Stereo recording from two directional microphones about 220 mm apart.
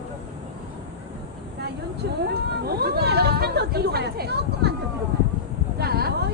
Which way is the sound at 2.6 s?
45° right (ahead or behind).